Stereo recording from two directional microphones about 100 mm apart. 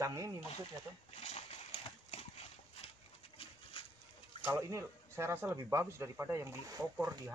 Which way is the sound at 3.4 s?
65° left (ahead or behind).